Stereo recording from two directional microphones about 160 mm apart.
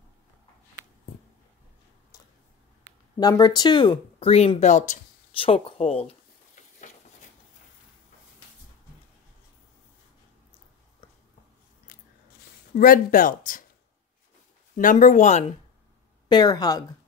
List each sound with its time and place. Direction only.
3.2 s speech: 25° left (ahead or behind); by 4.9 s 50° left (ahead or behind)
5.4 s speech: 35° left (ahead or behind)
11.9 s scissors: 65° left (ahead or behind)
12.7 s speech: 60° left (ahead or behind)
14.8 s speech: 55° left (ahead or behind)
16.3 s speech: 25° left (ahead or behind)